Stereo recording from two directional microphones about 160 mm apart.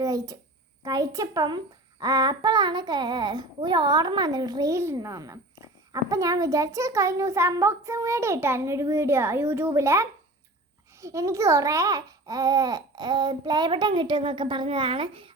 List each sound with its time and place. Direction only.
0.0 s a child's voice: 20° right (ahead or behind)